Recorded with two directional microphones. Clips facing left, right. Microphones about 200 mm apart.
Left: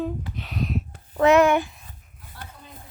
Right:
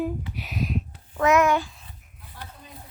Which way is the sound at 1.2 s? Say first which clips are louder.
Left 3 dB; 30° left (ahead or behind).